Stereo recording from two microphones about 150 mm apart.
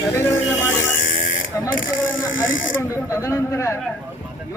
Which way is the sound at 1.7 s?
65° left (ahead or behind).